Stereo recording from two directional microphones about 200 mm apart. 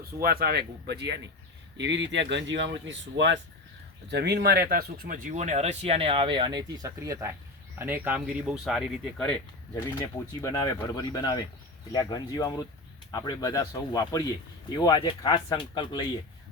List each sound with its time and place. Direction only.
0.0 s speech: 50° right (ahead or behind); by 9.4 s 5° left (ahead or behind)
10.4 s speech: 15° left (ahead or behind)